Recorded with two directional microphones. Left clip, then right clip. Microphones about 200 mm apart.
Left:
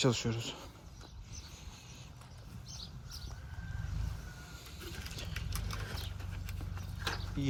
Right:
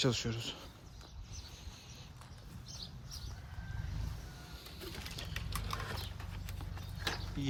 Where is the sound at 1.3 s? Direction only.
15° right (ahead or behind).